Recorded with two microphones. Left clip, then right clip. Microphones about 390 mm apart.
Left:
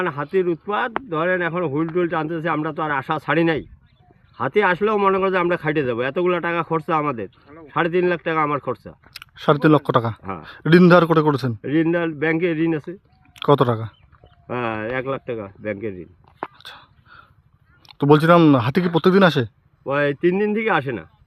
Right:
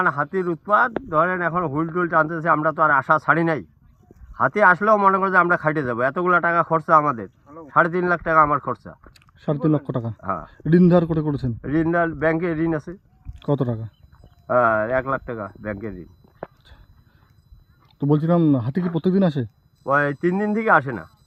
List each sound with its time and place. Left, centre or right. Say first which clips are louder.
0.0 s a man's voice: even; centre
9.8 s speech: left 10 dB; centre
10.2 s a man's voice: left 3 dB; centre
17.9 s speech: left 7 dB; centre
18.8 s a man's voice: left 7 dB; centre